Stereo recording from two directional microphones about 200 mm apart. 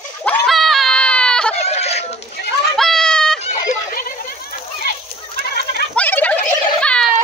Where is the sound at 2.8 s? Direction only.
Centre (ahead or behind).